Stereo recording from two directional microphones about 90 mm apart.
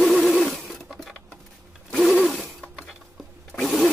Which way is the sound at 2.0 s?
Centre (ahead or behind).